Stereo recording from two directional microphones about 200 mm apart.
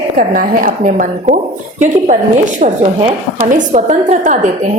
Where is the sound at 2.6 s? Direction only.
35° right (ahead or behind).